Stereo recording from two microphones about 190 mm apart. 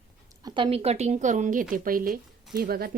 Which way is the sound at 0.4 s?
25° right (ahead or behind).